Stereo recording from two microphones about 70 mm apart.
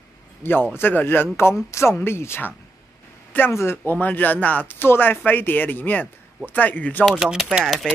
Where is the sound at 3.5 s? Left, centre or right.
Left.